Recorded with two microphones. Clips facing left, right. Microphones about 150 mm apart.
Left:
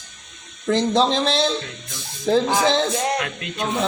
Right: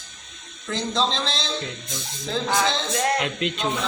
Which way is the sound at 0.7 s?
60° left (ahead or behind).